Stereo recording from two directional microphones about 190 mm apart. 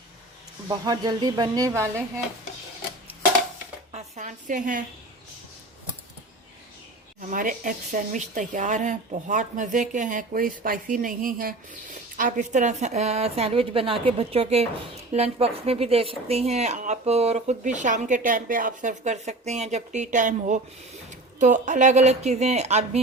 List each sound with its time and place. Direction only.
0.7 s speech: 20° right (ahead or behind)
3.9 s a woman's voice: 40° right (ahead or behind)
7.2 s speech: 45° right (ahead or behind)